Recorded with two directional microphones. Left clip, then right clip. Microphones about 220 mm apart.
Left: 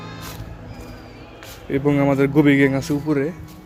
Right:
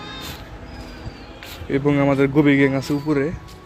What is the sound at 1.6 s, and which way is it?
Speech, 10° left (ahead or behind).